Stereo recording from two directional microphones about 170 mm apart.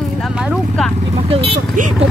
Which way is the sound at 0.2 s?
5° right (ahead or behind).